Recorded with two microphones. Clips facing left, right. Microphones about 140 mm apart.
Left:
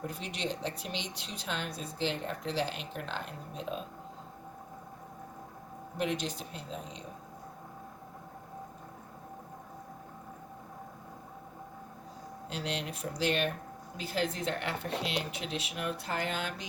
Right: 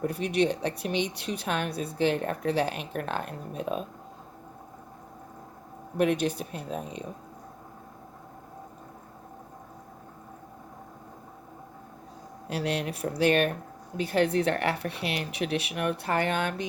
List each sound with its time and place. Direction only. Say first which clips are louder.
0.0 s speech: right 11 dB; 60° right (ahead or behind)
6.0 s speech: right 8 dB; 60° right (ahead or behind)
12.5 s speech: right 7 dB; 65° right (ahead or behind)